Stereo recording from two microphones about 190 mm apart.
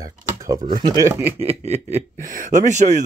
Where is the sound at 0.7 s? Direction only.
20° right (ahead or behind).